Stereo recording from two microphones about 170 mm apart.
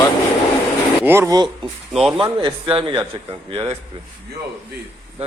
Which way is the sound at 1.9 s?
5° right (ahead or behind).